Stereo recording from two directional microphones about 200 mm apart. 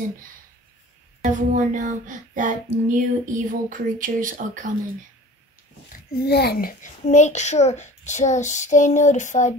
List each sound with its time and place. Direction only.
1.2 s child singing: 40° right (ahead or behind)
6.2 s a child's voice: 55° left (ahead or behind); by 9.6 s 40° left (ahead or behind)